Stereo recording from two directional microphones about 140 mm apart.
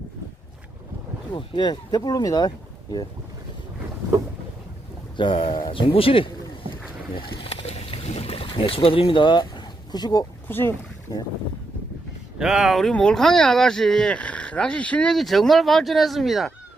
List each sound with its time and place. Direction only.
1.3 s speech: 35° left (ahead or behind)
5.1 s speech: 40° left (ahead or behind)
7.2 s a sound: 40° left (ahead or behind)
10.5 s speech: 15° left (ahead or behind)
12.4 s speech: 5° right (ahead or behind)